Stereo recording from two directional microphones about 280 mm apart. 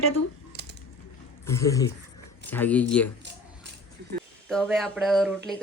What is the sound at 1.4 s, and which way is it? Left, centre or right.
Speech, centre.